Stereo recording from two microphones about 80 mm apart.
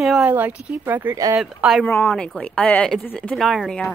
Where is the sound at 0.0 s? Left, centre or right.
Centre.